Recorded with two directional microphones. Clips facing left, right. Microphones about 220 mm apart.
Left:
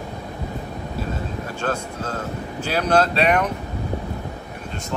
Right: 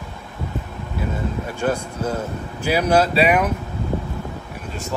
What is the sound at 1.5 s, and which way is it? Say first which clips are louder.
Speech: right 3 dB; 10° right (ahead or behind).